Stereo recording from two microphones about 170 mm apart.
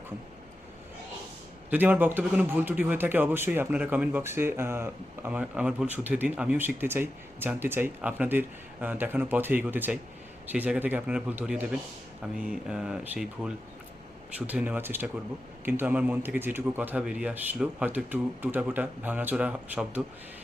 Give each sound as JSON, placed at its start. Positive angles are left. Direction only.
{"t": 1.7, "sound": "speech", "side_deg": -10}